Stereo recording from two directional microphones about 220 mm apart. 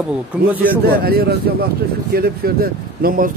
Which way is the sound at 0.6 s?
45° right (ahead or behind).